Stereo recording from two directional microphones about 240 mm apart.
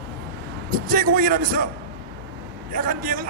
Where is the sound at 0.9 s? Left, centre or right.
Right.